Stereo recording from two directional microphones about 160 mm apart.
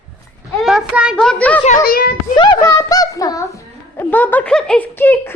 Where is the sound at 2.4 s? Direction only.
25° left (ahead or behind).